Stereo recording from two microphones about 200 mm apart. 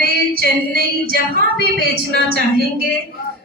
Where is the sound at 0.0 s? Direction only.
50° right (ahead or behind).